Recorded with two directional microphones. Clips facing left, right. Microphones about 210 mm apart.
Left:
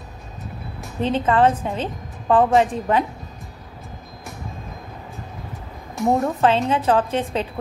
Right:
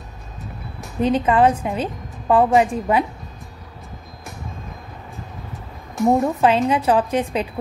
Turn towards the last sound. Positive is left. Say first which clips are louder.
# right 2 dB
turn(degrees=-15)  # may be behind; listen again after turning